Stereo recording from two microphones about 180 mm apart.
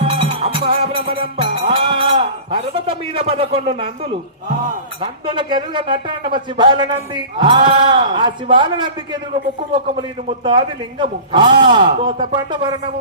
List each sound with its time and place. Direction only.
0.0 s music: 30° right (ahead or behind)
4.9 s speech: 25° right (ahead or behind)